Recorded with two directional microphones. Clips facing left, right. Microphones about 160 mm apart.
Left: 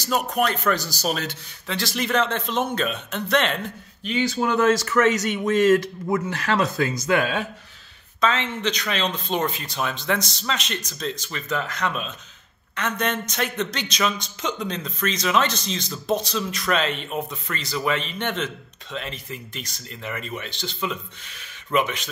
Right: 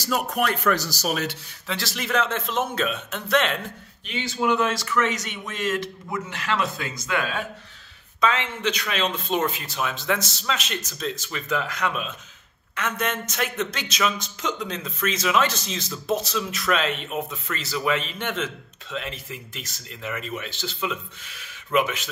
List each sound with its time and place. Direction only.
0.1 s speech: 25° left (ahead or behind)
1.1 s a man's voice: 5° right (ahead or behind)
4.0 s speech: 40° left (ahead or behind)
8.2 s a man's voice: 10° right (ahead or behind)